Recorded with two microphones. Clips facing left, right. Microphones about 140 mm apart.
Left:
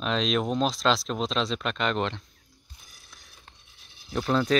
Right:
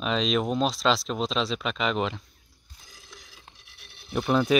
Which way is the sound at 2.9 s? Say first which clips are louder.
Right 8 dB; 90° right.